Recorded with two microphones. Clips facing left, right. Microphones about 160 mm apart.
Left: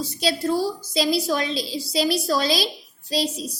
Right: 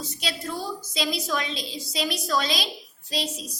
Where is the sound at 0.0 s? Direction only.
35° left (ahead or behind).